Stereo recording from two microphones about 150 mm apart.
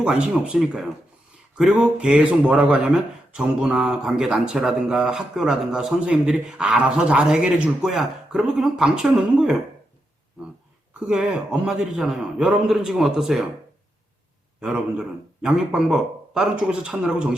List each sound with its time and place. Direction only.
0.0 s speech: 5° right (ahead or behind)
11.0 s speech: 5° right (ahead or behind)
14.6 s speech: 5° right (ahead or behind)